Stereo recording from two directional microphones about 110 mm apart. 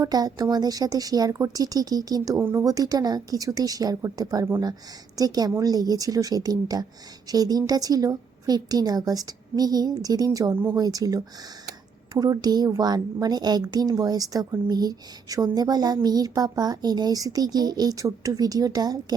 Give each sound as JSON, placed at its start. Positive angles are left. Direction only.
{"t": 0.0, "sound": "a child's voice", "side_deg": -35}
{"t": 2.4, "sound": "speech", "side_deg": -20}
{"t": 2.6, "sound": "a child's voice", "side_deg": -35}
{"t": 10.5, "sound": "speech", "side_deg": -20}
{"t": 10.8, "sound": "a child's voice", "side_deg": -35}